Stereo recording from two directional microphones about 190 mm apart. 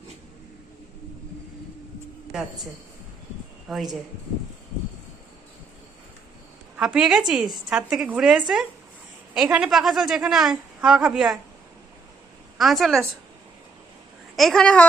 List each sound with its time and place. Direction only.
3.7 s a woman's voice: centre (ahead or behind)
6.7 s a woman's voice: 5° right (ahead or behind)
12.5 s a woman's voice: centre (ahead or behind)
14.3 s a woman's voice: centre (ahead or behind)